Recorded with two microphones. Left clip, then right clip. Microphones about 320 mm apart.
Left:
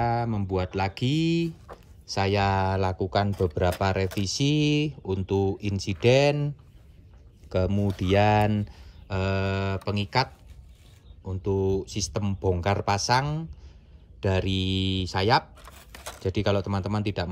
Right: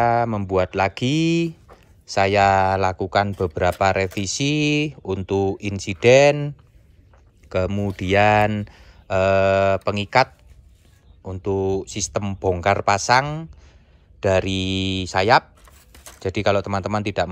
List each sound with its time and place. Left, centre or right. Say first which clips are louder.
0.0 s speech: right 8 dB; centre